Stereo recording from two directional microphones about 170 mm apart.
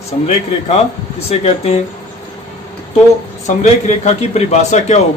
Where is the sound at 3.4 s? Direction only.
40° left (ahead or behind).